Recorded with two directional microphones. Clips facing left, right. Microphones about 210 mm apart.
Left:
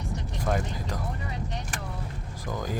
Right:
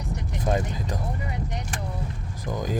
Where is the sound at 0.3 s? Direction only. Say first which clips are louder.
Right 3 dB; 20° right (ahead or behind).